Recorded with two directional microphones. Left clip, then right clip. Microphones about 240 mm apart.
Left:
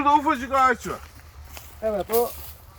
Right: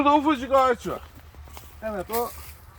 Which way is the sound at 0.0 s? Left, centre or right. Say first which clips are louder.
Left 1 dB; right.